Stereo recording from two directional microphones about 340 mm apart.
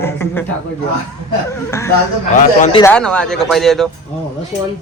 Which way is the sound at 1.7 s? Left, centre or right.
Centre.